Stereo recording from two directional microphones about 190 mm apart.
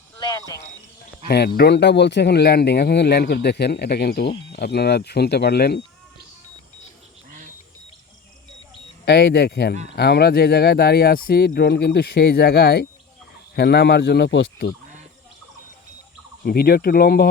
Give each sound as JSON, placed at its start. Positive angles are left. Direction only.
{"t": 0.2, "sound": "cricket", "side_deg": 20}
{"t": 1.3, "sound": "speech", "side_deg": 60}
{"t": 7.3, "sound": "a sound", "side_deg": -45}
{"t": 9.0, "sound": "speech", "side_deg": 60}
{"t": 16.4, "sound": "speech", "side_deg": 55}